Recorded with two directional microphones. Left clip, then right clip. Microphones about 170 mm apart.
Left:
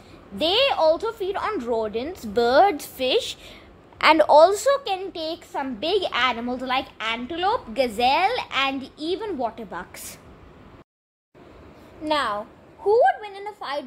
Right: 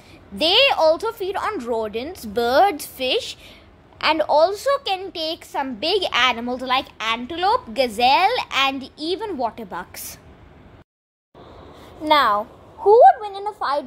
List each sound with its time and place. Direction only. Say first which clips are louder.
0.4 s a woman's voice: right 4 dB; 20° right (ahead or behind); by 4.7 s 5° left (ahead or behind)
4.7 s a woman's voice: right 2 dB; 10° right (ahead or behind)
12.0 s a woman's voice: right 7 dB; 35° right (ahead or behind)